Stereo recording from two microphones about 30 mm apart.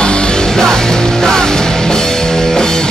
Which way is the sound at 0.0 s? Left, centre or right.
Left.